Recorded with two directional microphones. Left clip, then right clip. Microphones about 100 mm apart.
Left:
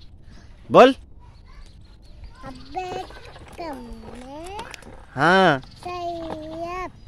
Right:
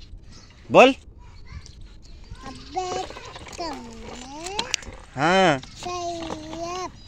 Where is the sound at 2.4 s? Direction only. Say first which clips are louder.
Right 2 dB; 30° left (ahead or behind).